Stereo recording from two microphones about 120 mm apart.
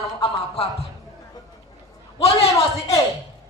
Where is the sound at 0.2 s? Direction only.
55° left (ahead or behind).